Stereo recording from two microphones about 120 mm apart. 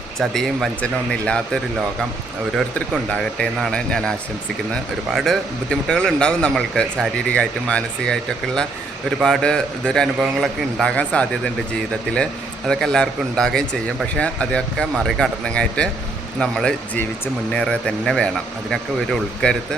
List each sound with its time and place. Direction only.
0.2 s a man's voice: centre (ahead or behind)
3.1 s a man's voice: 10° left (ahead or behind)